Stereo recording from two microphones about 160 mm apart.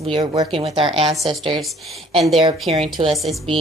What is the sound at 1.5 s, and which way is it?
A woman's voice, centre (ahead or behind).